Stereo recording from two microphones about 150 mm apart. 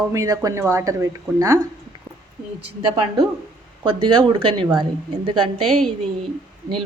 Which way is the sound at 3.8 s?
35° right (ahead or behind).